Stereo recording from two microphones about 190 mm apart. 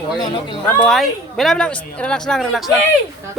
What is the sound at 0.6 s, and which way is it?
Speech, 5° left (ahead or behind).